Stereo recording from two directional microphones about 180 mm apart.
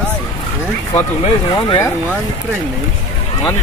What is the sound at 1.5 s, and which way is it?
Speech, 20° left (ahead or behind).